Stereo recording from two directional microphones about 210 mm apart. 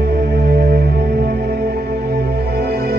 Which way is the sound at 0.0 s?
50° right (ahead or behind).